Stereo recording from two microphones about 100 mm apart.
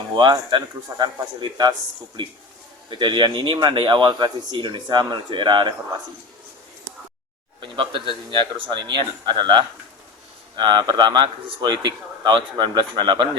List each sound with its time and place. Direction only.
0.2 s speech: 50° right (ahead or behind)
3.0 s speech: 55° right (ahead or behind)
7.6 s speech: 55° right (ahead or behind)